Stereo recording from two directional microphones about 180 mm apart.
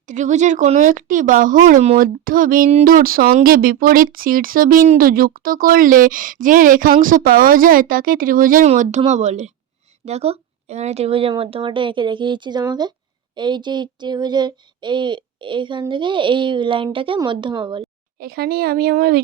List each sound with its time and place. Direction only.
0.1 s speech: 40° right (ahead or behind); by 17.8 s 25° right (ahead or behind)
18.2 s a woman's voice: 60° right (ahead or behind)